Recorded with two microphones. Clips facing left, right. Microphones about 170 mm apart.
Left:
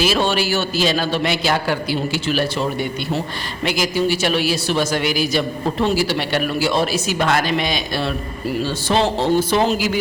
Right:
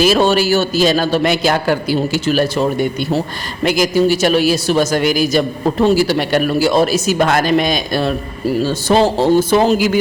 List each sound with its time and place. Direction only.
0.0 s speech: 40° right (ahead or behind)